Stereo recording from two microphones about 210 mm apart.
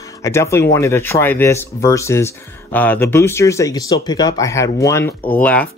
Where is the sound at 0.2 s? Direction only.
15° left (ahead or behind).